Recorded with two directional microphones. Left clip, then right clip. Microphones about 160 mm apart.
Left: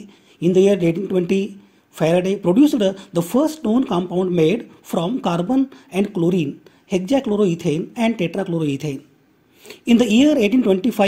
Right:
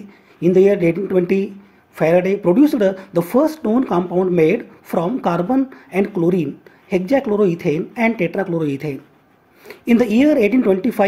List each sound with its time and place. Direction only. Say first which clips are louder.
0.4 s speech: right 2 dB; 50° left (ahead or behind)
3.3 s speech: right 3 dB; 20° left (ahead or behind)
3.8 s speech: right 3 dB; 45° left (ahead or behind)